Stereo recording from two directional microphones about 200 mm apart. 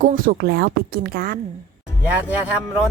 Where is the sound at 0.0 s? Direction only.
50° right (ahead or behind).